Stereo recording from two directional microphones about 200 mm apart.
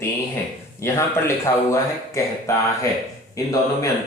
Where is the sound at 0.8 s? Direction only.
15° left (ahead or behind).